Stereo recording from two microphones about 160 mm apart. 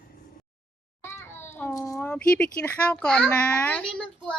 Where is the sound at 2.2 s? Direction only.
5° left (ahead or behind).